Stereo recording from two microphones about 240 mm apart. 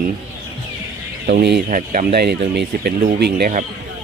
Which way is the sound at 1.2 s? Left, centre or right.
Right.